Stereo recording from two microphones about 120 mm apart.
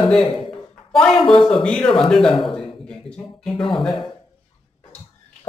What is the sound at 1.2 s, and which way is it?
Speech, 45° left (ahead or behind).